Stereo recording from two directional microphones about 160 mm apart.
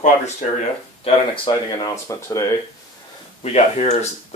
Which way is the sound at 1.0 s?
25° left (ahead or behind).